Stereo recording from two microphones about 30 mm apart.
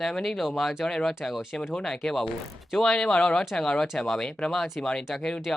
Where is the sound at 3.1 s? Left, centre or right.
Left.